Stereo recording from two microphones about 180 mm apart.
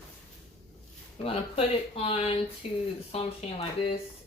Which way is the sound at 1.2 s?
35° left (ahead or behind).